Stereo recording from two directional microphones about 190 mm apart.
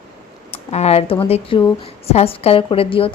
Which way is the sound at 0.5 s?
35° left (ahead or behind).